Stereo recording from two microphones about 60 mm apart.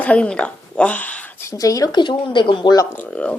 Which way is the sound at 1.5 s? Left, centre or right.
Left.